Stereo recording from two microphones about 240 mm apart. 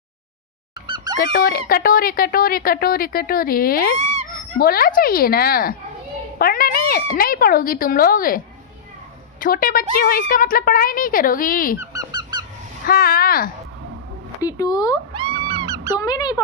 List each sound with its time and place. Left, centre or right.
0.9 s goose: centre
1.2 s speech: left
9.4 s speech: left
11.8 s honk: centre
12.9 s speech: left
14.4 s speech: centre
15.1 s cat: centre
16.0 s speech: centre